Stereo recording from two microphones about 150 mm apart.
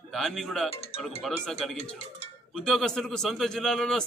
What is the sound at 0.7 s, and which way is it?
Speech, 40° left (ahead or behind).